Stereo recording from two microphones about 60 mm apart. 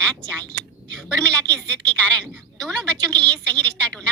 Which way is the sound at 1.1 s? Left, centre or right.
Centre.